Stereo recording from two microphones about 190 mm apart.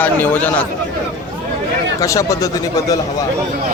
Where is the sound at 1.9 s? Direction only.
15° left (ahead or behind).